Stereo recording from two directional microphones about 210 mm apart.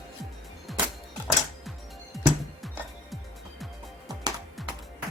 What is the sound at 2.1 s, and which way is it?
Music, centre (ahead or behind).